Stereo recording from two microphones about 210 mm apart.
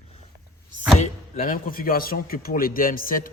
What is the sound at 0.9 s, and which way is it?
A man's voice, 40° left (ahead or behind).